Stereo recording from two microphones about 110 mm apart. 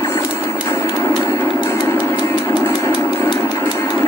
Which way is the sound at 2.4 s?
20° left (ahead or behind).